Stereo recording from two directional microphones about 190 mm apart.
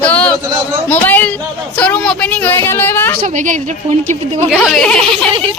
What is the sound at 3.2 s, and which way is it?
Speech, 40° right (ahead or behind).